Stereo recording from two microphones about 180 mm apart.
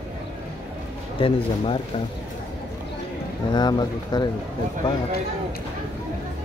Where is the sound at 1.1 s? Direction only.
30° left (ahead or behind).